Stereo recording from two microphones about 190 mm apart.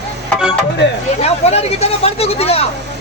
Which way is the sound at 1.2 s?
35° left (ahead or behind).